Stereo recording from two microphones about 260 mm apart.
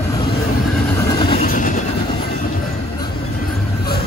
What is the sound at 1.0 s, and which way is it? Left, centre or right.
Vehicle, centre.